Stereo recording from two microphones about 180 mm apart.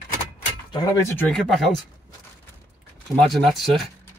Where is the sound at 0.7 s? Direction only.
20° left (ahead or behind).